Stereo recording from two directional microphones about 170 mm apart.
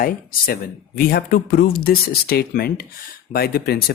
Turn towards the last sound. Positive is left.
turn(degrees=70)  # may be behind; listen again after turning